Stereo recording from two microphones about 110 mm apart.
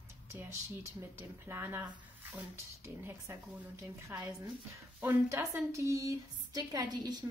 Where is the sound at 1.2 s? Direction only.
20° right (ahead or behind).